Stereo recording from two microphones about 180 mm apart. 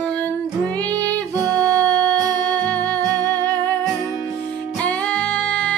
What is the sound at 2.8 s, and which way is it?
Music, 20° right (ahead or behind).